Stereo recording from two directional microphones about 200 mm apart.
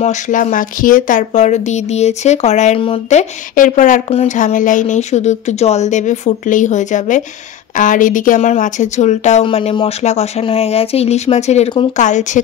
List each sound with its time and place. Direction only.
0.0 s speech: 40° left (ahead or behind)